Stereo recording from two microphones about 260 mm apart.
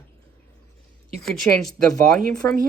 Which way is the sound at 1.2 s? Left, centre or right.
Centre.